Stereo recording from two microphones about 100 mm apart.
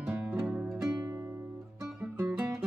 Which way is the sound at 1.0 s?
35° right (ahead or behind).